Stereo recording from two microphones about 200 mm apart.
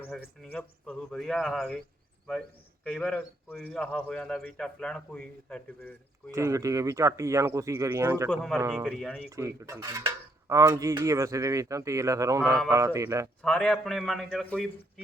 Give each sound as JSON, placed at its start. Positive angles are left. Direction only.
{"t": 0.4, "sound": "a man's voice", "side_deg": 5}
{"t": 2.8, "sound": "a man's voice", "side_deg": 5}
{"t": 6.3, "sound": "speech", "side_deg": -15}
{"t": 8.3, "sound": "a man's voice", "side_deg": 0}
{"t": 9.3, "sound": "speech", "side_deg": -15}
{"t": 13.4, "sound": "a man's voice", "side_deg": 5}